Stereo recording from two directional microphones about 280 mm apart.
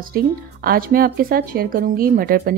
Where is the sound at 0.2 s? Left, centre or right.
Right.